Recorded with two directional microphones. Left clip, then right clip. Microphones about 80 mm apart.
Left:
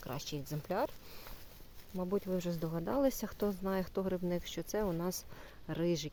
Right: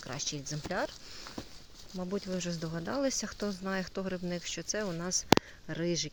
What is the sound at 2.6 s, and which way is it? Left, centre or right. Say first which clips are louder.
Speech: even; centre.